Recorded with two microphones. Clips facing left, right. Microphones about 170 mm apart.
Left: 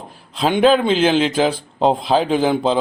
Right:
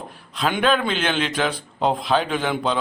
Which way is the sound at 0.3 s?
35° left (ahead or behind).